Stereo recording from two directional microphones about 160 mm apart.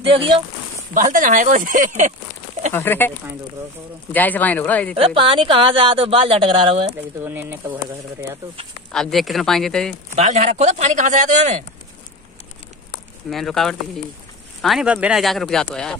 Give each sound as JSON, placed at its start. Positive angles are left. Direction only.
{"t": 0.0, "sound": "speech", "side_deg": -35}
{"t": 0.9, "sound": "speech", "side_deg": -55}
{"t": 2.7, "sound": "speech", "side_deg": 10}
{"t": 4.1, "sound": "speech", "side_deg": 10}
{"t": 4.9, "sound": "speech", "side_deg": -35}
{"t": 7.2, "sound": "speech", "side_deg": -15}
{"t": 8.9, "sound": "speech", "side_deg": 0}
{"t": 10.1, "sound": "speech", "side_deg": -45}
{"t": 13.3, "sound": "speech", "side_deg": 0}